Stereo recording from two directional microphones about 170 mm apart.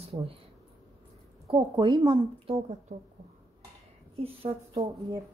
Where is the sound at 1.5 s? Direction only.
25° right (ahead or behind).